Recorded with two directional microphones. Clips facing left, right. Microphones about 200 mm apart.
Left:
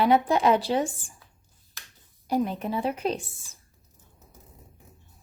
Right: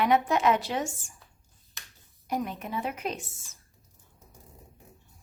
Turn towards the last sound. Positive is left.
turn(degrees=30)  # may be behind; listen again after turning